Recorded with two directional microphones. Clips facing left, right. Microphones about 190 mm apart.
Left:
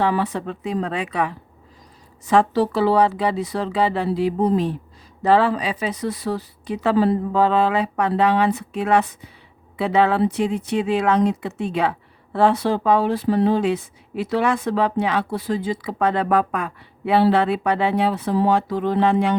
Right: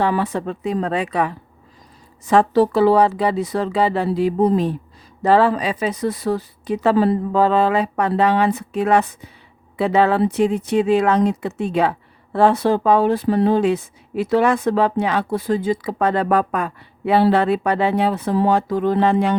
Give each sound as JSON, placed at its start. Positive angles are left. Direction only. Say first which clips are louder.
{"t": 0.0, "sound": "a woman's voice", "louder": "right 1 dB", "side_deg": -45}